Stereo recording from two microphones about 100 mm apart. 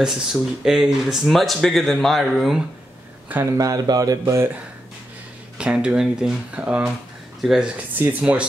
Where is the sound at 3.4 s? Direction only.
35° right (ahead or behind).